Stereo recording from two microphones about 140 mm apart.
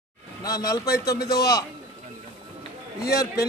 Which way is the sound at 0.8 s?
90° left.